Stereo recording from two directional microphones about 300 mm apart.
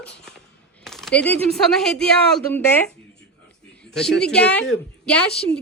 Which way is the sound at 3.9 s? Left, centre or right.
Centre.